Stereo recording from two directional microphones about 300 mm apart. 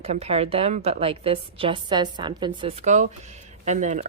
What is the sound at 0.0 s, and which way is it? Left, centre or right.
A woman's voice, right.